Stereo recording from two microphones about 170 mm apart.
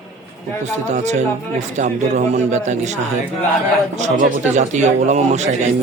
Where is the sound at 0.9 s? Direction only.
45° right (ahead or behind).